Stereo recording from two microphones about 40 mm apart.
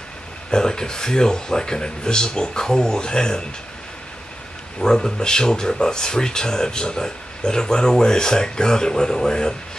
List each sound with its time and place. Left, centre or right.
0.5 s speech: centre
4.7 s speech: centre